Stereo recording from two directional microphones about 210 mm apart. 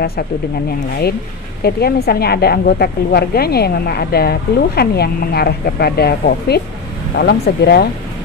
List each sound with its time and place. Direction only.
1.6 s a woman's voice: 50° left (ahead or behind)